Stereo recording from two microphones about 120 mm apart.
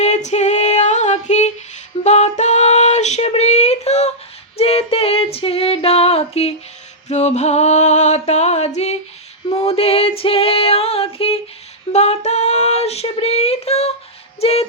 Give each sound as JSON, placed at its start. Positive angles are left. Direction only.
{"t": 0.0, "sound": "female singing", "side_deg": 75}
{"t": 2.0, "sound": "a sound", "side_deg": 75}
{"t": 4.5, "sound": "female singing", "side_deg": 55}
{"t": 7.1, "sound": "a sound", "side_deg": 70}
{"t": 9.5, "sound": "female singing", "side_deg": 55}
{"t": 11.9, "sound": "female singing", "side_deg": 65}